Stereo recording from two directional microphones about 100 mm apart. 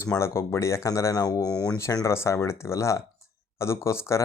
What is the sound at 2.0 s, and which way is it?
Speech, 30° left (ahead or behind).